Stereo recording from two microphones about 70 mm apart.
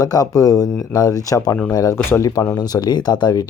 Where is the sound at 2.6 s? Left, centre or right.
Left.